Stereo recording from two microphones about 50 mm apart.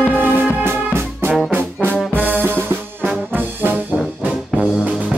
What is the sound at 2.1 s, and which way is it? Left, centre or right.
Music, right.